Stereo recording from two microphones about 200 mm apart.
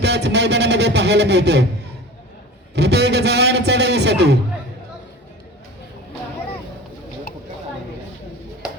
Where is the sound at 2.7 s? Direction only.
55° right (ahead or behind).